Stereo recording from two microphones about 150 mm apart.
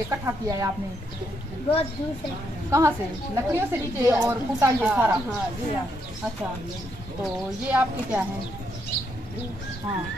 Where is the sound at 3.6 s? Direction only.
15° right (ahead or behind).